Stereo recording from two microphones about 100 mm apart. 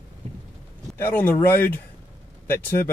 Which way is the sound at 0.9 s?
20° left (ahead or behind).